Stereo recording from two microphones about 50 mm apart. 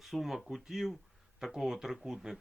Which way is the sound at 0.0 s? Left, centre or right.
Centre.